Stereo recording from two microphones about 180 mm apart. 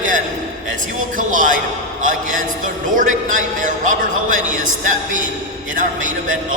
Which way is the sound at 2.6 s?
45° right (ahead or behind).